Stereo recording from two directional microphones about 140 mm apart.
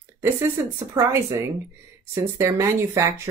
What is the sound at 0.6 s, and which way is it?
Speech, 20° right (ahead or behind).